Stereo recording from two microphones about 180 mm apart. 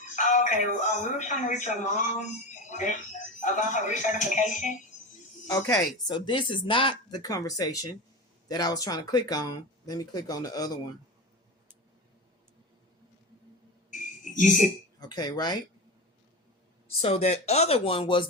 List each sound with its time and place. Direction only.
0.2 s speech: 45° left (ahead or behind)
5.5 s speech: 20° left (ahead or behind)
13.9 s a sound: 45° left (ahead or behind)
15.0 s speech: 25° left (ahead or behind)
17.0 s speech: 35° left (ahead or behind)